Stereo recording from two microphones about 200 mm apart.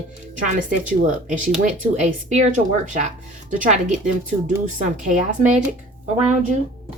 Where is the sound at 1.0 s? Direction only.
40° right (ahead or behind).